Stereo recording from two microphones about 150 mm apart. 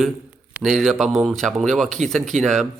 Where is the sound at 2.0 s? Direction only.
50° right (ahead or behind).